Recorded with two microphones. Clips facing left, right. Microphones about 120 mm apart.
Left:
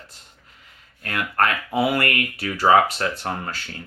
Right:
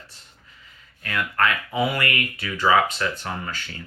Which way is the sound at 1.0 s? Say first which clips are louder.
Even; 50° left (ahead or behind).